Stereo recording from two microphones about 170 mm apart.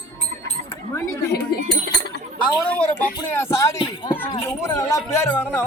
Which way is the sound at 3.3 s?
15° left (ahead or behind).